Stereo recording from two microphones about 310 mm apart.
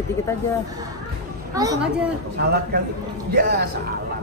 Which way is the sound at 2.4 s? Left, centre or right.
Right.